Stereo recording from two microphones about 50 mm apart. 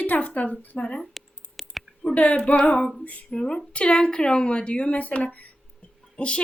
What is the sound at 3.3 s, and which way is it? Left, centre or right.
A woman's voice, centre.